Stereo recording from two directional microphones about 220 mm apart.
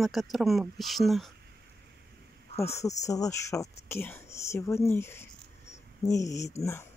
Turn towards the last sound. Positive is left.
turn(degrees=10)  # may be behind; listen again after turning